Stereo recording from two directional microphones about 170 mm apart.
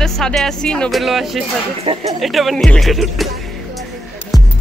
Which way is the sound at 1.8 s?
30° right (ahead or behind).